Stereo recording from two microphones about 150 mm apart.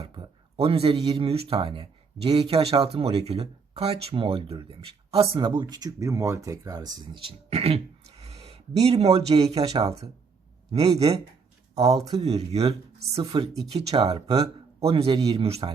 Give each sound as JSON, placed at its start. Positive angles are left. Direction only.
{"t": 0.5, "sound": "speech", "side_deg": -40}
{"t": 9.7, "sound": "speech", "side_deg": -25}
{"t": 10.7, "sound": "speech", "side_deg": -45}
{"t": 11.9, "sound": "speech", "side_deg": -25}
{"t": 12.2, "sound": "speech", "side_deg": -45}
{"t": 13.3, "sound": "speech", "side_deg": -30}